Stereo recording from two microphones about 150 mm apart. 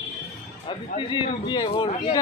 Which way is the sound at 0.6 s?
35° left (ahead or behind).